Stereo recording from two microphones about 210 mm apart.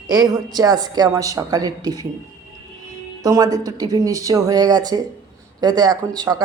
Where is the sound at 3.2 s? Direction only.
15° right (ahead or behind).